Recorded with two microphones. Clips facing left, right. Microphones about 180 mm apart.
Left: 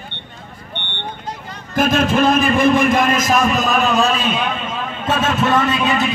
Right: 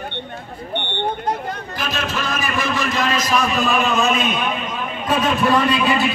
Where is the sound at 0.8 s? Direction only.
50° right (ahead or behind).